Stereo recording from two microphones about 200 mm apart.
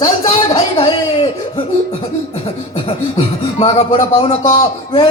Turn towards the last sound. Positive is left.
turn(degrees=25)  # may be behind; listen again after turning